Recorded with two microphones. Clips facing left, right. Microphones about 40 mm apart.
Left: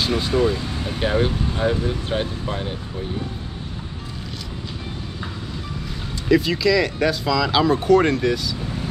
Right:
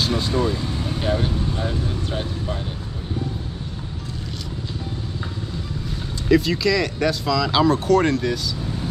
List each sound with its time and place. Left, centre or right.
0.2 s speech: centre
0.5 s speech: left
6.2 s speech: centre